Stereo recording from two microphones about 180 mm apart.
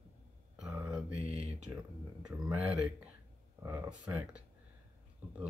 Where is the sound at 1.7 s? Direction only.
15° right (ahead or behind).